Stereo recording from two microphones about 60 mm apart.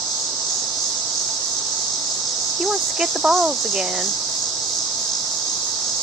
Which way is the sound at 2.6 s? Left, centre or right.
Centre.